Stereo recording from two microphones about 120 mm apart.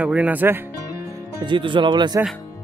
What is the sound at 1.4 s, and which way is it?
Speech, 45° right (ahead or behind).